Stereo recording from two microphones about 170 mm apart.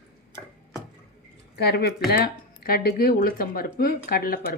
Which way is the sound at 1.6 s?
70° left (ahead or behind).